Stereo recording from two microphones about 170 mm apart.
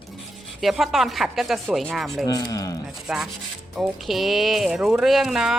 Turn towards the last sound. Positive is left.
turn(degrees=0)  # may be behind; listen again after turning